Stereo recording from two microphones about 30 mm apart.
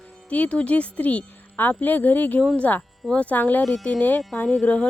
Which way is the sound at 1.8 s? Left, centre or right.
Left.